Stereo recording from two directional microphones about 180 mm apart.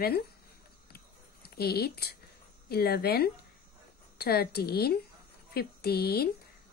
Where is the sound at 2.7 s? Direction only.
60° left (ahead or behind).